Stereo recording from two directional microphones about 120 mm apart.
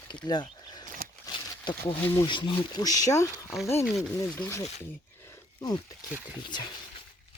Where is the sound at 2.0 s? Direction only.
20° left (ahead or behind).